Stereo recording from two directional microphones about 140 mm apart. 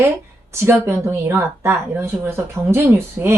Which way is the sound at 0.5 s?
20° right (ahead or behind).